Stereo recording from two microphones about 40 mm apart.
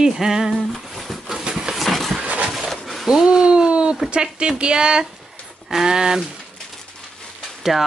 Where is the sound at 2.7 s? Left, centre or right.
Centre.